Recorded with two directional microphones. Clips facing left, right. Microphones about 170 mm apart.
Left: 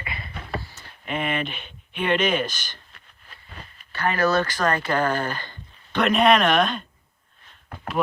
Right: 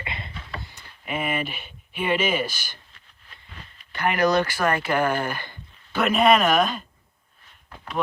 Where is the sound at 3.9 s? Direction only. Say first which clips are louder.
Right 1 dB; 15° right (ahead or behind).